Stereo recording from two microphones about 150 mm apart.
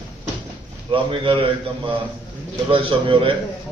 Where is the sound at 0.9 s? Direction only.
35° right (ahead or behind).